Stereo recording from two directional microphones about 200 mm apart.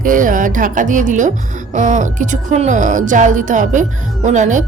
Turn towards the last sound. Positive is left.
turn(degrees=-40)  # may be behind; listen again after turning